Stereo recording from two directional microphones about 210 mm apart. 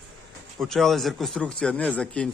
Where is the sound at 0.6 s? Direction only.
Centre (ahead or behind).